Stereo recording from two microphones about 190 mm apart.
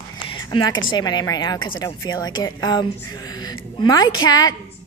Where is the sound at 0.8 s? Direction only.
20° left (ahead or behind).